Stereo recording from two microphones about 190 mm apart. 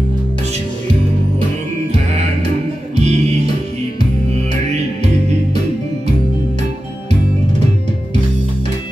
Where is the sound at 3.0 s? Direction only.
35° right (ahead or behind).